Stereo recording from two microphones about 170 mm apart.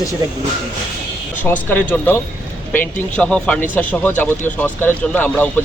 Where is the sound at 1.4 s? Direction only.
10° left (ahead or behind).